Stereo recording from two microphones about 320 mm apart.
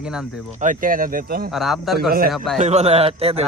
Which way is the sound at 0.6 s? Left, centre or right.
Right.